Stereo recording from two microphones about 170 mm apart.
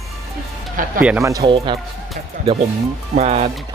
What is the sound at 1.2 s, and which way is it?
Speech, 20° right (ahead or behind).